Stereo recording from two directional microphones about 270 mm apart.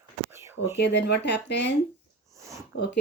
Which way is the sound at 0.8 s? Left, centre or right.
Left.